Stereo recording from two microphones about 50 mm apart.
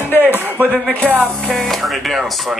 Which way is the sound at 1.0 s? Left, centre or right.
Right.